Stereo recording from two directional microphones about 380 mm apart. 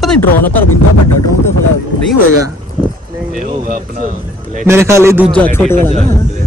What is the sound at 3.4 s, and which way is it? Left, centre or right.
Speech, right.